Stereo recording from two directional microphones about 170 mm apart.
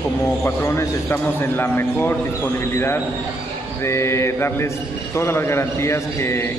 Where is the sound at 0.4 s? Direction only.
15° left (ahead or behind).